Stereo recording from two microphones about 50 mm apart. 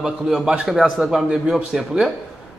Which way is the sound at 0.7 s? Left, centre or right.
Centre.